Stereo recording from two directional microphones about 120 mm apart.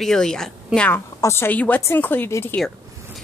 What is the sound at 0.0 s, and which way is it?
A woman's voice, 5° left (ahead or behind).